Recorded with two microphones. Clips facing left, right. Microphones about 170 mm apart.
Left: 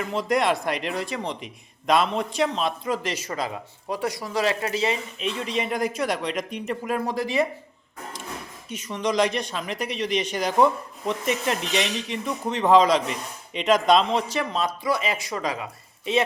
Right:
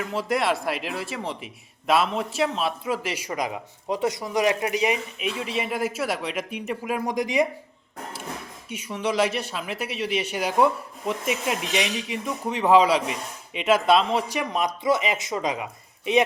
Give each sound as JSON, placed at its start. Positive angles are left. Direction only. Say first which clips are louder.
{"t": 0.0, "sound": "speech", "louder": "left 2 dB", "side_deg": -5}
{"t": 8.7, "sound": "speech", "louder": "left 1 dB", "side_deg": -10}